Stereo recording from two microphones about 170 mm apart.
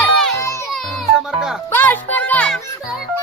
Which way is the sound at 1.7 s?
10° left (ahead or behind).